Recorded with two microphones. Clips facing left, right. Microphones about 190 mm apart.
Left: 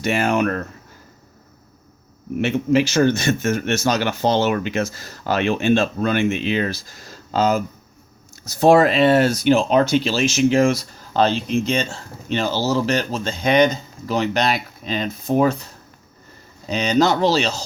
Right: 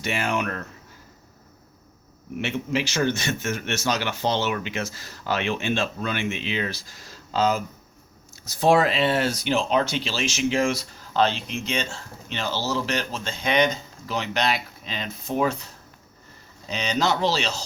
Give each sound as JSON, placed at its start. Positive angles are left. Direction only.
{"t": 0.0, "sound": "a man's voice", "side_deg": 45}
{"t": 2.4, "sound": "a man's voice", "side_deg": 45}
{"t": 16.6, "sound": "speech", "side_deg": 45}